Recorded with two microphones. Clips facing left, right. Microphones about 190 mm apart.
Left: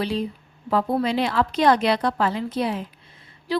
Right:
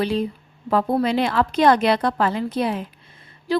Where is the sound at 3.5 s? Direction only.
50° right (ahead or behind).